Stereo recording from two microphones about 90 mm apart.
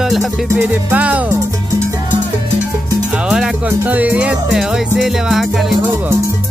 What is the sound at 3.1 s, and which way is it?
Music, 10° right (ahead or behind).